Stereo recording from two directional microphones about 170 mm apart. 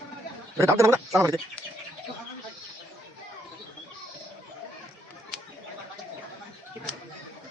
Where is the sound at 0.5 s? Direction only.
20° right (ahead or behind).